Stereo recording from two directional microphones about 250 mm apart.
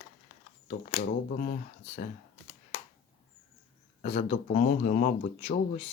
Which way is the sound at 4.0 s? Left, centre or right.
Left.